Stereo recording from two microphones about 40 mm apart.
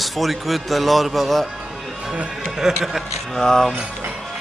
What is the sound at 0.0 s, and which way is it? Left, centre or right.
Speech, centre.